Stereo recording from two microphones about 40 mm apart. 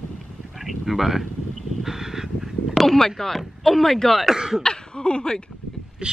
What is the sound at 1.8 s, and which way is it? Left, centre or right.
Crow, centre.